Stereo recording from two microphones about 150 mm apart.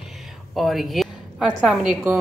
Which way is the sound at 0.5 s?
Centre (ahead or behind).